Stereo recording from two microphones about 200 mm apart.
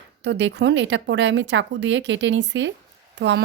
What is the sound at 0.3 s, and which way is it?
Speech, 60° right (ahead or behind).